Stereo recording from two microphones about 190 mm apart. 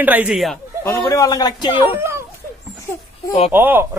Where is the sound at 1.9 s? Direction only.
15° right (ahead or behind).